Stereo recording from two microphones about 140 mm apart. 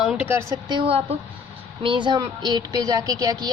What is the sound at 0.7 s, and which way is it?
Speech, 35° right (ahead or behind).